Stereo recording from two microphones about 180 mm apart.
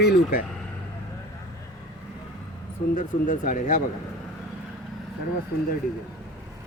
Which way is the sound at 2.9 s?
45° left (ahead or behind).